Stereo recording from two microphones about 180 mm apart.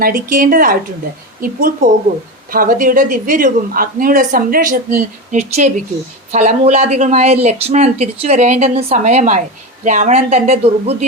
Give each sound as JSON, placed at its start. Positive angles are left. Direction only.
{"t": 0.0, "sound": "a woman's voice", "side_deg": -50}